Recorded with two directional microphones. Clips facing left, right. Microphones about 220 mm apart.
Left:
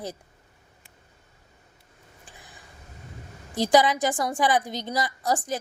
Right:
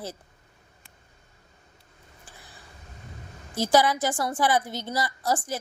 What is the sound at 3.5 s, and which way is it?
A woman's voice, 15° left (ahead or behind).